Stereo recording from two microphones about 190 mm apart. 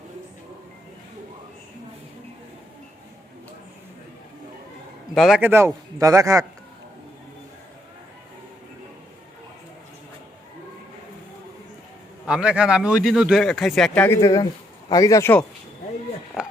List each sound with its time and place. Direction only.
5.1 s a man's voice: centre (ahead or behind)
12.2 s speech: 5° right (ahead or behind); by 15.4 s 10° left (ahead or behind)